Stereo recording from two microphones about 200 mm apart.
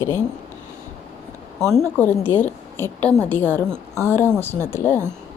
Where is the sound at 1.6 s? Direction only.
Centre (ahead or behind).